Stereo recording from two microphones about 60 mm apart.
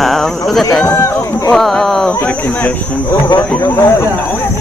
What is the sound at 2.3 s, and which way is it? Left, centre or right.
Speech, left.